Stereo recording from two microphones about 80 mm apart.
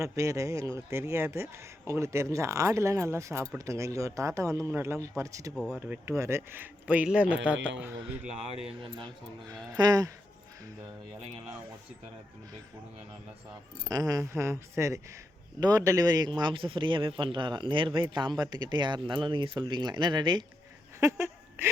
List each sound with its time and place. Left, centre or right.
0.0 s speech: right
5.5 s speech: centre
6.1 s speech: right; by 7.9 s centre
9.7 s a man's voice: right
13.8 s a man's voice: right
16.3 s speech: right
21.0 s a sound: right